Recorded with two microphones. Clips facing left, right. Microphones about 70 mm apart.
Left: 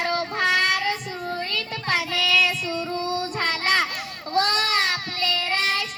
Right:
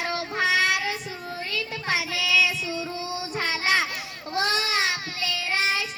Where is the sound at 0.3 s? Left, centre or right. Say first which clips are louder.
Even; centre.